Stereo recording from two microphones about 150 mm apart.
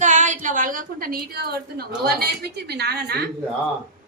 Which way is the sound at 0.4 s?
60° right (ahead or behind).